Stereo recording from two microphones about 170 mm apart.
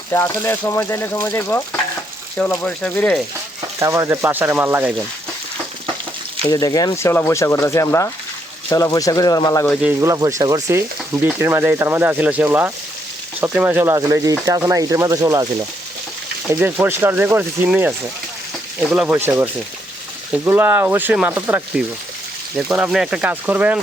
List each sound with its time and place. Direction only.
0.1 s speech: 15° left (ahead or behind)
3.8 s frying: 15° right (ahead or behind)
6.4 s speech: 20° left (ahead or behind)
9.8 s frying: 15° right (ahead or behind)
16.5 s frying: 10° right (ahead or behind)